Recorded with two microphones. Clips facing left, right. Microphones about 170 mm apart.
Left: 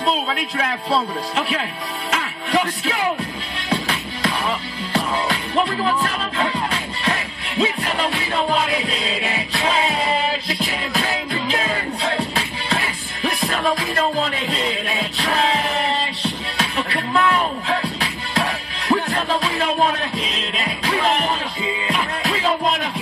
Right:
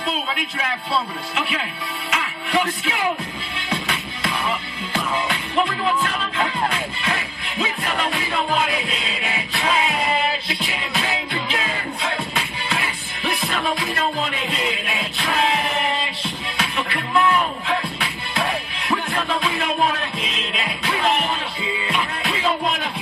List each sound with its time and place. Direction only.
0.9 s speech: 35° left (ahead or behind)
2.0 s music: 35° left (ahead or behind)
11.0 s music: 40° left (ahead or behind)
21.8 s music: 40° left (ahead or behind)